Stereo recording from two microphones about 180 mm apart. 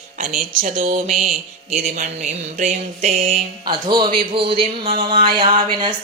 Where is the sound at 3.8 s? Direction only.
25° right (ahead or behind).